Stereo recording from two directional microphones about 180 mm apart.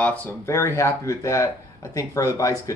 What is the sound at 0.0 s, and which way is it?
Speech, 10° left (ahead or behind).